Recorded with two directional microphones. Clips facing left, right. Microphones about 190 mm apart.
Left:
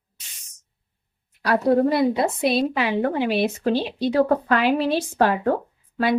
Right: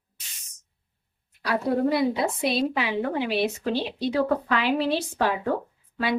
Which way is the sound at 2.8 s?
50° left (ahead or behind).